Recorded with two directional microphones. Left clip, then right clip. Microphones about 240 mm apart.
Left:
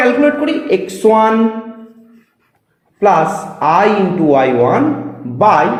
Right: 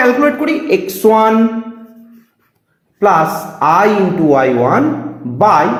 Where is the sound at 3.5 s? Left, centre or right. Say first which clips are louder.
Right 1 dB; right.